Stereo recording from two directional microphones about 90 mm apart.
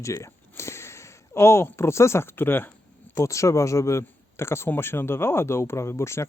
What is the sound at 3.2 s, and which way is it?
Speech, 35° left (ahead or behind).